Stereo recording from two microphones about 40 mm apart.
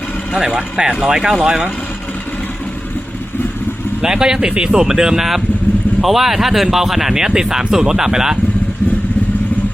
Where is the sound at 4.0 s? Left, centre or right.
Centre.